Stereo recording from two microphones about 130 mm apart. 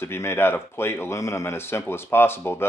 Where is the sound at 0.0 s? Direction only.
20° left (ahead or behind).